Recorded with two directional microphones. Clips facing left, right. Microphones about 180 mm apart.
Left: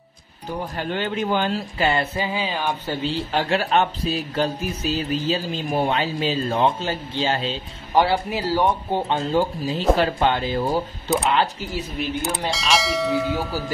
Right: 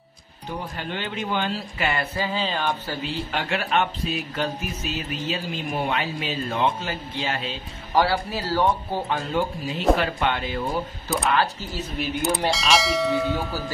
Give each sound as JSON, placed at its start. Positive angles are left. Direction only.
{"t": 0.7, "sound": "a man's voice", "side_deg": 45}
{"t": 2.1, "sound": "music", "side_deg": 15}
{"t": 2.9, "sound": "a man's voice", "side_deg": 30}
{"t": 9.9, "sound": "a man's voice", "side_deg": 35}
{"t": 11.1, "sound": "a man's voice", "side_deg": 20}
{"t": 12.0, "sound": "speech", "side_deg": 0}